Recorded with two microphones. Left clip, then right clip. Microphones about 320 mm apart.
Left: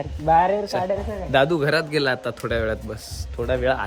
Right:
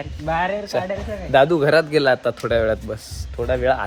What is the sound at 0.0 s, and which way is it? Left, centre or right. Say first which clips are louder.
Speech: left 4 dB; left.